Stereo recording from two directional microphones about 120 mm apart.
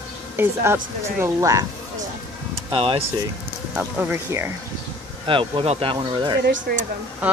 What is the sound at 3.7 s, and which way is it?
Speech, 10° right (ahead or behind).